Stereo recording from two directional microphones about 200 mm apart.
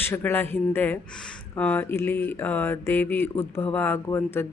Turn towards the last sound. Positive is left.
turn(degrees=10)  # may be behind; listen again after turning